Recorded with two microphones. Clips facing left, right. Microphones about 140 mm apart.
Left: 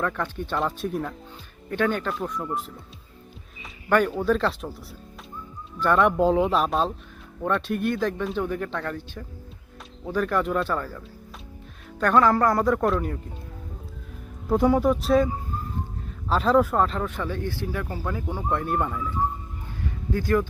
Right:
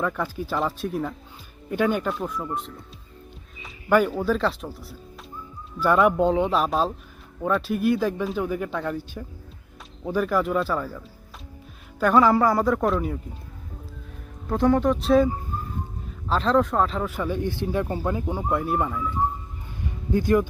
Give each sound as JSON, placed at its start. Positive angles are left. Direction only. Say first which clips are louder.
{"t": 0.0, "sound": "speech", "louder": "right 1 dB", "side_deg": -5}
{"t": 1.7, "sound": "speech", "louder": "right 2 dB", "side_deg": -10}
{"t": 3.8, "sound": "speech", "louder": "right 1 dB", "side_deg": -5}
{"t": 14.4, "sound": "speech", "louder": "even", "side_deg": 10}
{"t": 16.3, "sound": "speech", "louder": "left 1 dB", "side_deg": 5}
{"t": 17.2, "sound": "speech", "louder": "right 3 dB", "side_deg": -15}
{"t": 19.8, "sound": "music", "louder": "right 4 dB", "side_deg": -20}